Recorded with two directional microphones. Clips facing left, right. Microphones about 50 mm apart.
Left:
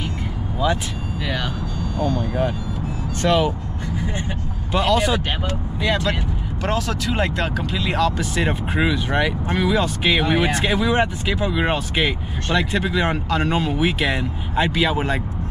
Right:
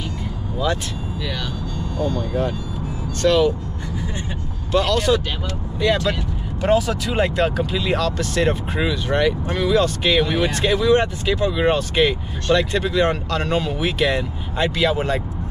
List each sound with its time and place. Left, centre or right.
1.2 s speech: left
4.7 s speech: centre
5.8 s speech: centre